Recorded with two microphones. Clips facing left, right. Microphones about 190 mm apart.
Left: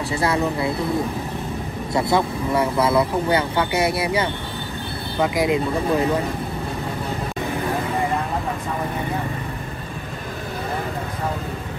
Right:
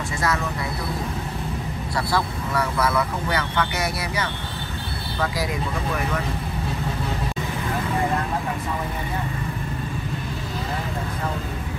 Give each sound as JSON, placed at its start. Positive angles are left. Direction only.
{"t": 0.2, "sound": "speech", "side_deg": 30}
{"t": 2.0, "sound": "speech", "side_deg": 20}